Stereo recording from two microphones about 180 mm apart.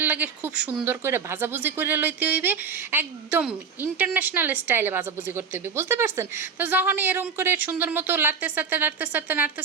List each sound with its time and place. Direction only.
0.0 s speech: 10° right (ahead or behind)